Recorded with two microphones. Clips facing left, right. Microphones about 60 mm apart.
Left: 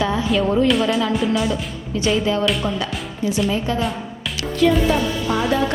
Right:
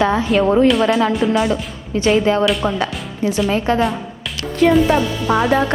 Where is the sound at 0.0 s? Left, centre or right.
Right.